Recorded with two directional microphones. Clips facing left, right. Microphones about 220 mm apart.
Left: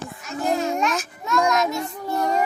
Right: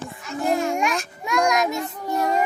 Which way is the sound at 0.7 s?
15° right (ahead or behind).